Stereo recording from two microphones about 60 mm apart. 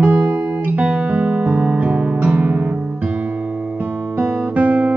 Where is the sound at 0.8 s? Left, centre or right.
Centre.